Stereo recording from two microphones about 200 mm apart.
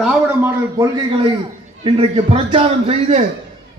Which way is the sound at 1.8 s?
25° right (ahead or behind).